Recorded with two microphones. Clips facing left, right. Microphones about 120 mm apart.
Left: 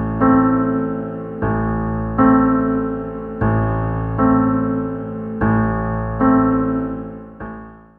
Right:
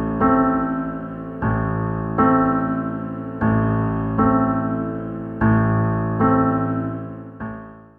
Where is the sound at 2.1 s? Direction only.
Centre (ahead or behind).